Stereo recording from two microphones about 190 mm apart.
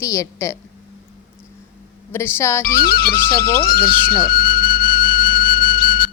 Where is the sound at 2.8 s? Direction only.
50° left (ahead or behind).